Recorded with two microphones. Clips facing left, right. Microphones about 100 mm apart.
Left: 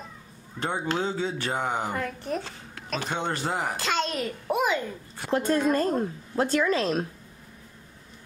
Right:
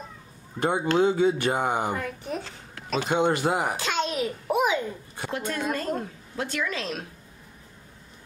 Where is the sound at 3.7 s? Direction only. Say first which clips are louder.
Right 1 dB; centre (ahead or behind).